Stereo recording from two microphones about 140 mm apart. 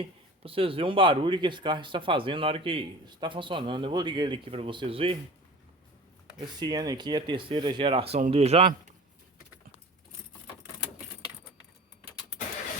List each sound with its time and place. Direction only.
0.0 s speech: 40° right (ahead or behind)
6.4 s speech: 30° right (ahead or behind); by 8.6 s 45° right (ahead or behind)